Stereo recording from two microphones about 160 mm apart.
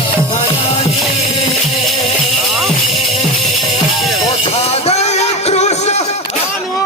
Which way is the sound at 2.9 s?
45° left (ahead or behind).